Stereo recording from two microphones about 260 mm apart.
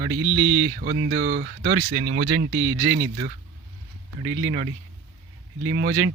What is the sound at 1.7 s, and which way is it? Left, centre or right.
Speech, right.